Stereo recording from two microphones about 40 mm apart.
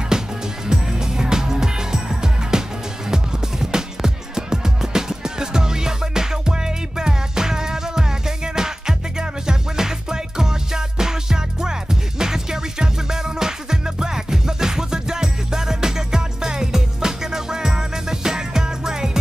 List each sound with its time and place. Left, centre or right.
0.1 s music: centre